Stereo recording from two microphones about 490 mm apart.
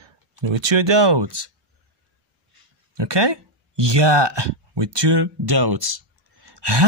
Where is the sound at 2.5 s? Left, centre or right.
Right.